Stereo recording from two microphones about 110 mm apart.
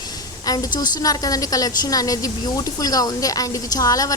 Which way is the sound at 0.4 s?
35° left (ahead or behind).